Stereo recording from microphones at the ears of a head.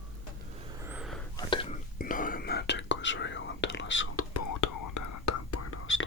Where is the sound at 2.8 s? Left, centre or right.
Left.